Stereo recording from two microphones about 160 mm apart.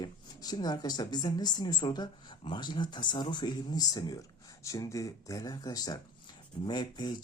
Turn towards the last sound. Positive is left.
turn(degrees=25)  # may be behind; listen again after turning